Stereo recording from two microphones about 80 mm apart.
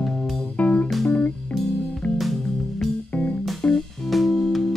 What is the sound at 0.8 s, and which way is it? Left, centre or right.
Music, centre.